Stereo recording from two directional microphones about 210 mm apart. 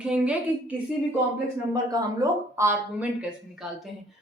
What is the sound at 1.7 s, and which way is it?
A woman's voice, 15° right (ahead or behind).